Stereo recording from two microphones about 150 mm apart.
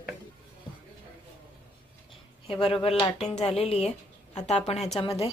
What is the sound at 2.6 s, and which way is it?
A woman's voice, 40° left (ahead or behind).